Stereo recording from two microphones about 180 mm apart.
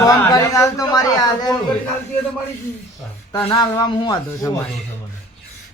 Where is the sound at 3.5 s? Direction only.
25° left (ahead or behind).